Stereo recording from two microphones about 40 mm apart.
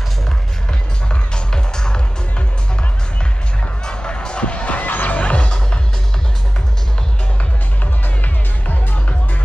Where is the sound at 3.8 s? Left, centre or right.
Left.